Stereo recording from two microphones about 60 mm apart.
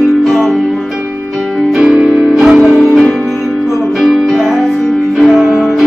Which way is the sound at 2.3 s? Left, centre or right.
Centre.